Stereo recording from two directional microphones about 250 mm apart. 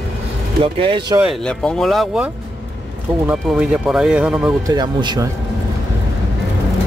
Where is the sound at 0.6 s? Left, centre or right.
Right.